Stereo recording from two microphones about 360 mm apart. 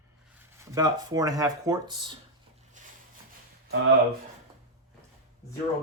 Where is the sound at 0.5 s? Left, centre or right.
Centre.